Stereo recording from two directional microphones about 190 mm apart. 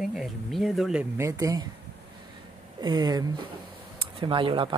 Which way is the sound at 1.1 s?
15° right (ahead or behind).